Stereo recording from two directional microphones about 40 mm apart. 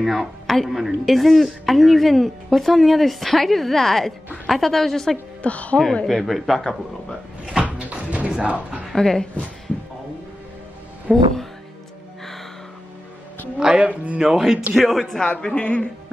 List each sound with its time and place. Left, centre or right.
0.0 s a woman's voice: centre
5.4 s a woman's voice: left
6.0 s speech: centre
7.9 s music: right
8.4 s speech: right
8.9 s a woman's voice: centre
11.1 s speech: centre
13.6 s speech: right
13.8 s speech: right
14.2 s speech: centre
14.7 s speech: centre
15.2 s speech: left